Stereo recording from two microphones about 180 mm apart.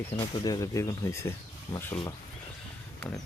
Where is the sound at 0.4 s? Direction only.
20° left (ahead or behind).